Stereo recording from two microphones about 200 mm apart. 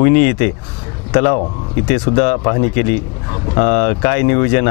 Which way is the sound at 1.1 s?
30° left (ahead or behind).